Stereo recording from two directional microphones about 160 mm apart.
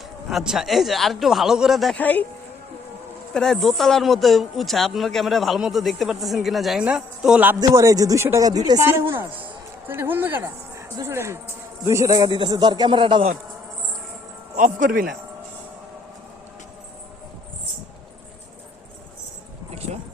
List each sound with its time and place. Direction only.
0.3 s speech: centre (ahead or behind)
3.3 s a woman's voice: 5° left (ahead or behind); by 13.3 s 30° right (ahead or behind)
14.5 s speech: 55° right (ahead or behind)